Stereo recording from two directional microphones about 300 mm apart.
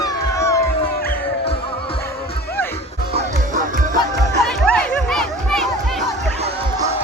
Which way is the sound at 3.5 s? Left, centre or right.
Right.